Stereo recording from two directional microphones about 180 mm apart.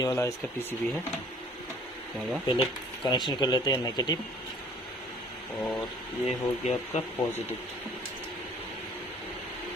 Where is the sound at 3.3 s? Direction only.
25° left (ahead or behind).